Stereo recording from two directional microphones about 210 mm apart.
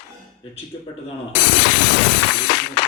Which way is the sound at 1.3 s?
50° left (ahead or behind).